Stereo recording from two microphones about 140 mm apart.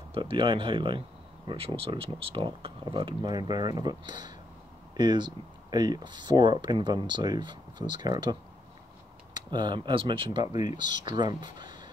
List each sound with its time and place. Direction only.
0.1 s speech: 35° right (ahead or behind)
9.5 s speech: 30° right (ahead or behind)